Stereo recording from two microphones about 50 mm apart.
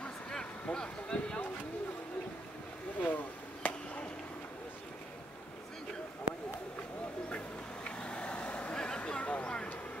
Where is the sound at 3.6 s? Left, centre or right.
Left.